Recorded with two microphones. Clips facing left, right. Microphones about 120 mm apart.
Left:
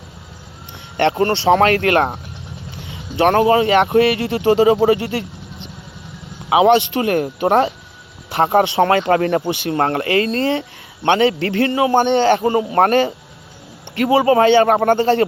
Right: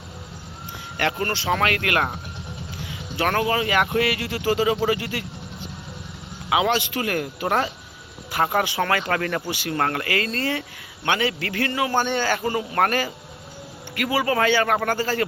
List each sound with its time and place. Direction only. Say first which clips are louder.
1.2 s a man's voice: left 11 dB; 30° left (ahead or behind)